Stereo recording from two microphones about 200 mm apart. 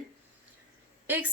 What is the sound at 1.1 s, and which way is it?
Speech, 10° right (ahead or behind).